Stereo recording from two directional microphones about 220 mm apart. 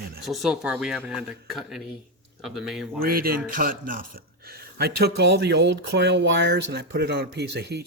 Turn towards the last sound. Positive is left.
turn(degrees=-50)  # may be behind; listen again after turning